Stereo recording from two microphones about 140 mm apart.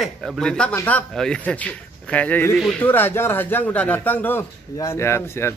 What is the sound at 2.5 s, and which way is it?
Speech, centre (ahead or behind).